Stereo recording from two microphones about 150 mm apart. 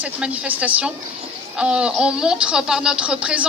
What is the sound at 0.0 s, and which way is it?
A woman's voice, 10° right (ahead or behind).